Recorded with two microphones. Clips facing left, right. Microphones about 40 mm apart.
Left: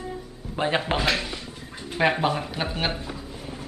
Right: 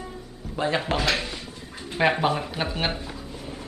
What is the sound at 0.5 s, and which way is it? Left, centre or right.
Speech, left.